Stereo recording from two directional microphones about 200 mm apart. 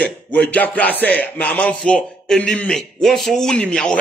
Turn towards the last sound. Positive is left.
turn(degrees=5)  # may be behind; listen again after turning